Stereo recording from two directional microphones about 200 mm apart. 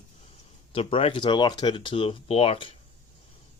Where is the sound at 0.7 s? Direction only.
25° left (ahead or behind).